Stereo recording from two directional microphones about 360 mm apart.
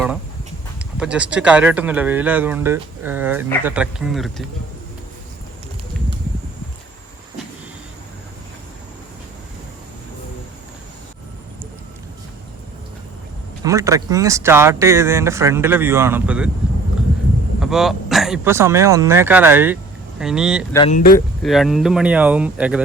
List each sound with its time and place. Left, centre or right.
0.9 s speech: centre
13.7 s speech: centre
17.6 s speech: centre
20.7 s speech: centre
21.2 s speech: centre